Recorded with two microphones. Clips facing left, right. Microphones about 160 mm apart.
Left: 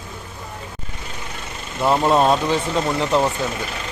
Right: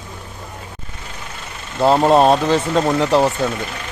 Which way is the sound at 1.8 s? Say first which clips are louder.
Right 4 dB; 30° right (ahead or behind).